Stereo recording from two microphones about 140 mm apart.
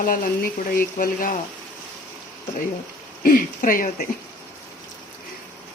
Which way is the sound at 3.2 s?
80° left.